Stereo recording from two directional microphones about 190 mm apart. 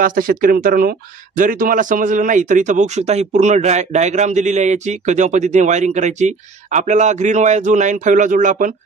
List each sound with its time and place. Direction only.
0.0 s speech: 45° right (ahead or behind)